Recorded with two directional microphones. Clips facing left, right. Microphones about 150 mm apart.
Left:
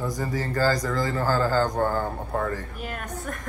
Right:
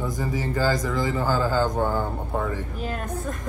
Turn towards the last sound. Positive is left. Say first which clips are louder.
# right 3 dB
turn(degrees=-25)  # may be behind; listen again after turning